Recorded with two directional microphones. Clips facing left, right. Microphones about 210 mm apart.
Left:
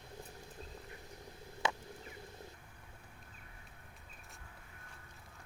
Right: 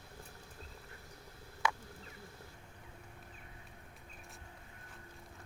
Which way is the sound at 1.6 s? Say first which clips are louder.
Even; 25° left (ahead or behind).